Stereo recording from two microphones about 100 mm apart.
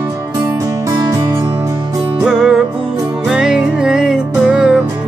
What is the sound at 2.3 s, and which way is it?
Music, 5° right (ahead or behind).